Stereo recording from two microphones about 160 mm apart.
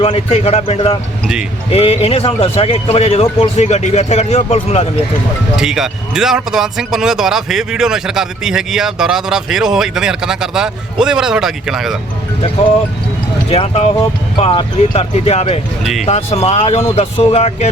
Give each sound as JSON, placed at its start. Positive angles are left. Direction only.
{"t": 0.0, "sound": "a man's voice", "side_deg": 35}
{"t": 5.5, "sound": "a man's voice", "side_deg": -5}
{"t": 13.5, "sound": "a man's voice", "side_deg": 40}
{"t": 15.8, "sound": "a man's voice", "side_deg": 0}
{"t": 16.0, "sound": "a man's voice", "side_deg": 40}